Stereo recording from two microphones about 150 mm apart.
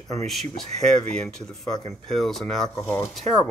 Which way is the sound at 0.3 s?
Centre (ahead or behind).